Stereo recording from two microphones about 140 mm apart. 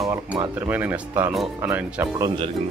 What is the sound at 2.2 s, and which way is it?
Speech, 30° right (ahead or behind).